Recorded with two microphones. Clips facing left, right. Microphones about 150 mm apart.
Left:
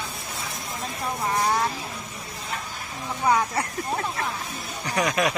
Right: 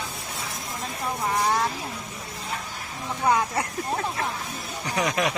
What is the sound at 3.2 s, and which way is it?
Speech, 5° right (ahead or behind).